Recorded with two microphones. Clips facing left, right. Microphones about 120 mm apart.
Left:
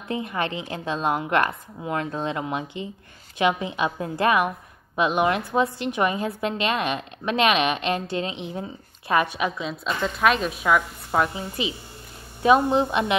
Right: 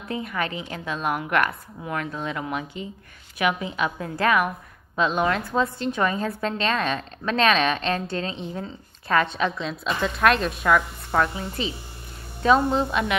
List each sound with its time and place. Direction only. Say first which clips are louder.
0.1 s a woman's voice: left 1 dB; 25° left (ahead or behind)